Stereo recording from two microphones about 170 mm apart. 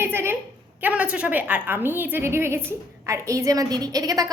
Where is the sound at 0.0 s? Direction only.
15° right (ahead or behind).